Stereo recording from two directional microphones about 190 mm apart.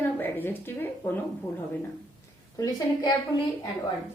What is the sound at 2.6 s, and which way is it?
Speech, 20° left (ahead or behind).